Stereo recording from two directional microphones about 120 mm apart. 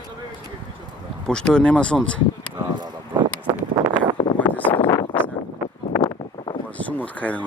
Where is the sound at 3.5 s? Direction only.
40° right (ahead or behind).